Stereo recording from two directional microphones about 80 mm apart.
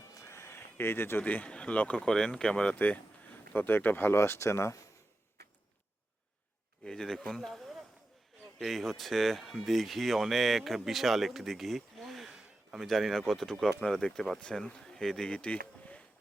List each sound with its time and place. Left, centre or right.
0.1 s speech: left
6.8 s speech: centre